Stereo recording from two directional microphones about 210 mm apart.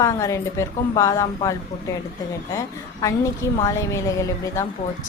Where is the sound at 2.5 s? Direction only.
15° left (ahead or behind).